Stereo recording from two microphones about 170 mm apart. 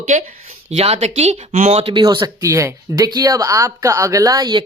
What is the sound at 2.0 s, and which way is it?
Speech, 25° right (ahead or behind).